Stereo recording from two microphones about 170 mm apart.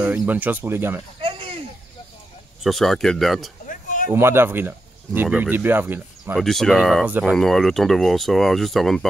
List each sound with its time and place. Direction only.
0.3 s speech: 10° right (ahead or behind)
1.2 s a sound: 35° right (ahead or behind)
2.6 s speech: centre (ahead or behind)
3.6 s a sound: 50° left (ahead or behind)
4.1 s speech: 15° right (ahead or behind)
6.3 s speech: centre (ahead or behind)
7.3 s speech: centre (ahead or behind)